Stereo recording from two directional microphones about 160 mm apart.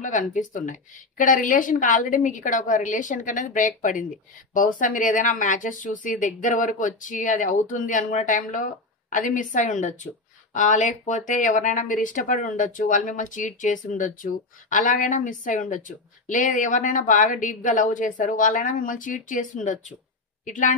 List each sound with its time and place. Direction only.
0.0 s speech: 55° left (ahead or behind)